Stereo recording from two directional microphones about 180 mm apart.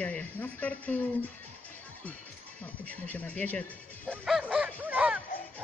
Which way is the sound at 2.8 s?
10° left (ahead or behind).